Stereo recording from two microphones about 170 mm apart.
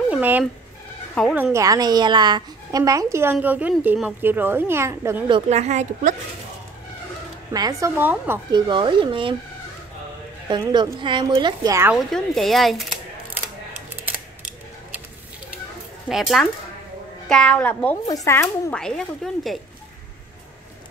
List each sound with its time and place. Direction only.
0.1 s a woman's voice: 10° right (ahead or behind)
5.3 s a woman's voice: 40° right (ahead or behind)
7.5 s a woman's voice: 25° right (ahead or behind)
8.0 s a woman's voice: 10° right (ahead or behind)
8.5 s a woman's voice: 25° right (ahead or behind)
10.5 s a woman's voice: 25° right (ahead or behind)
11.9 s speech: centre (ahead or behind)
13.9 s typewriter: 10° right (ahead or behind)
16.1 s a child's voice: centre (ahead or behind)
18.0 s speech: 20° left (ahead or behind)
18.7 s speech: 5° left (ahead or behind)